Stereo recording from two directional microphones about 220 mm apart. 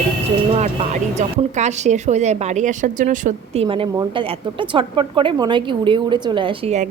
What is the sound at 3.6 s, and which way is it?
A woman's voice, 25° right (ahead or behind).